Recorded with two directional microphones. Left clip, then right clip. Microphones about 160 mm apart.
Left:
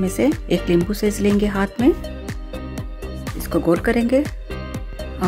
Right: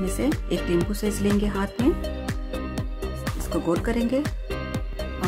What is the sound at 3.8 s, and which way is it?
Speech, 20° left (ahead or behind).